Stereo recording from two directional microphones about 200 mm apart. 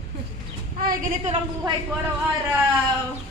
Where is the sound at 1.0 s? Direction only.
40° right (ahead or behind).